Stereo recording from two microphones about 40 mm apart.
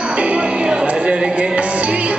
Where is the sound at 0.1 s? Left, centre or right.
Right.